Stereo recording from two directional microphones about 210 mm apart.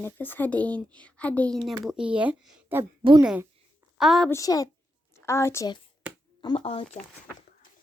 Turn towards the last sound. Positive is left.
turn(degrees=25)  # may be behind; listen again after turning